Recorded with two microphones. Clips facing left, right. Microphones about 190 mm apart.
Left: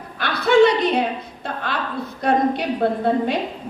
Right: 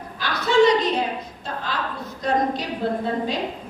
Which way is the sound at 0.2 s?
60° left (ahead or behind).